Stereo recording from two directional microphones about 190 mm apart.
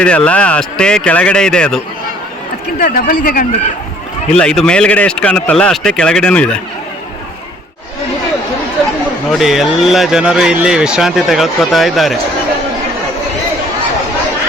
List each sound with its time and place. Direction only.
0.0 s speech: 5° left (ahead or behind)
2.8 s speech: 50° left (ahead or behind)
4.4 s speech: 5° left (ahead or behind)
9.3 s speech: centre (ahead or behind)